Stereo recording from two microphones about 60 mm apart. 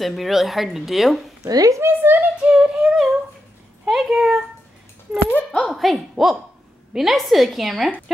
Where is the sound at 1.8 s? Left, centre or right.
Right.